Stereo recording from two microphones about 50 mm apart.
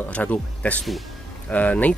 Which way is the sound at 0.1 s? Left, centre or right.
Left.